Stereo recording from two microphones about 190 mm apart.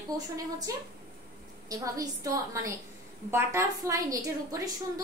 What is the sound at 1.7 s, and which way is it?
A woman's voice, 15° right (ahead or behind).